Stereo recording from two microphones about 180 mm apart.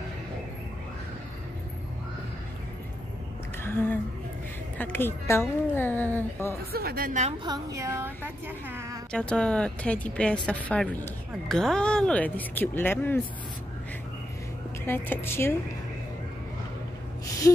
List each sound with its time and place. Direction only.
3.6 s a sound: 10° left (ahead or behind)
4.7 s speech: 10° left (ahead or behind)
6.7 s speech: 60° right (ahead or behind)
7.4 s a woman's voice: 20° right (ahead or behind)
9.1 s speech: 5° left (ahead or behind)
14.9 s speech: 15° left (ahead or behind)